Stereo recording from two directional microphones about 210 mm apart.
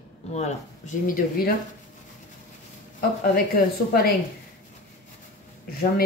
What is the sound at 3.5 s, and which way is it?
Speech, 45° left (ahead or behind).